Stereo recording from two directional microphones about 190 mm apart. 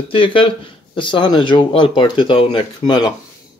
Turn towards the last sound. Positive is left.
turn(degrees=20)  # may be behind; listen again after turning